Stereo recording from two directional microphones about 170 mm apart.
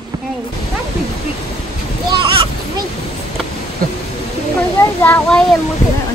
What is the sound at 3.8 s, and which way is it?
Speech, 60° right (ahead or behind).